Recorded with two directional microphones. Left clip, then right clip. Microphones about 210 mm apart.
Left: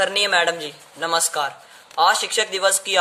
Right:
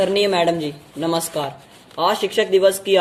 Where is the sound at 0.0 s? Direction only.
20° left (ahead or behind).